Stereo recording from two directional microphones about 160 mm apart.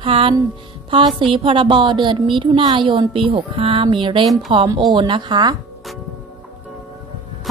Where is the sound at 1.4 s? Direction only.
30° right (ahead or behind).